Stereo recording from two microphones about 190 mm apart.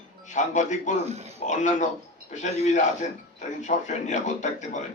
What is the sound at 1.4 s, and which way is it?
A man's voice, 40° left (ahead or behind).